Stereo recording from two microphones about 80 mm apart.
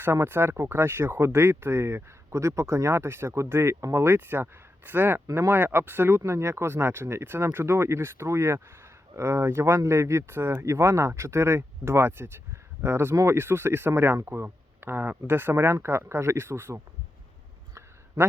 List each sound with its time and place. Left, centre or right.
0.0 s speech: right